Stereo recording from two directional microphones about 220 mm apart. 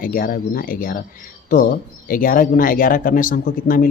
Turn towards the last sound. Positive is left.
turn(degrees=40)  # may be behind; listen again after turning